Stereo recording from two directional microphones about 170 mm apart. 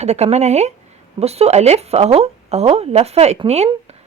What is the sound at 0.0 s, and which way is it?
A woman's voice, 40° right (ahead or behind).